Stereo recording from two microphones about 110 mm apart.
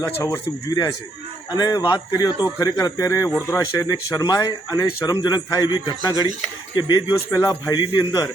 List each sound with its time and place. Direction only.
0.0 s speech: 35° left (ahead or behind)